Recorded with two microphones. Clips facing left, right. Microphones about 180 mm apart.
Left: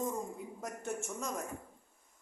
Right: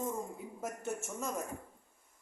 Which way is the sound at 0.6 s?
5° right (ahead or behind).